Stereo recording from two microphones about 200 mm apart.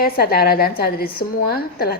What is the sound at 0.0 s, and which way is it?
A woman's voice, 50° left (ahead or behind).